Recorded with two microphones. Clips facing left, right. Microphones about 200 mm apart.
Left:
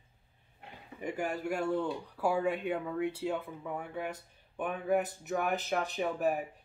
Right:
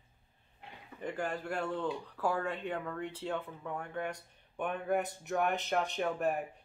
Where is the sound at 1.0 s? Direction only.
10° left (ahead or behind).